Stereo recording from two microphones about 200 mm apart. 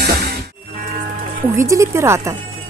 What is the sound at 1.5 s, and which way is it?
Speech, 15° right (ahead or behind).